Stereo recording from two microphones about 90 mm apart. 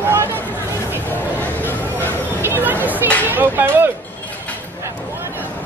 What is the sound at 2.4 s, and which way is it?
Chatter, 20° right (ahead or behind).